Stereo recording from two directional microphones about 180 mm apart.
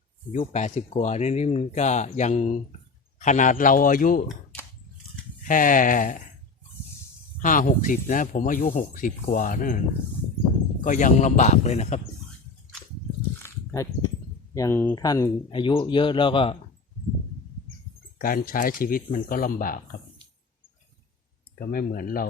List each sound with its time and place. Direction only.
0.3 s speech: 40° left (ahead or behind)
5.5 s speech: 50° left (ahead or behind)
7.3 s speech: 45° left (ahead or behind)
10.8 s speech: 45° left (ahead or behind)
13.4 s a sound: 15° left (ahead or behind)
14.5 s speech: 15° left (ahead or behind)
18.2 s speech: 50° left (ahead or behind)
21.6 s speech: 55° left (ahead or behind)